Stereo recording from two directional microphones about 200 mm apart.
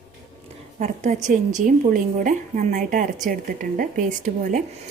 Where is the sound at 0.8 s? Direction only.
35° right (ahead or behind).